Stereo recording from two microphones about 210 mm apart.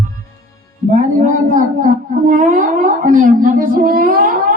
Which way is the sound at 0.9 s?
40° right (ahead or behind).